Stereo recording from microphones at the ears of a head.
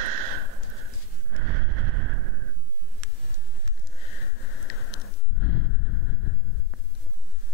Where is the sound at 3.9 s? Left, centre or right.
Left.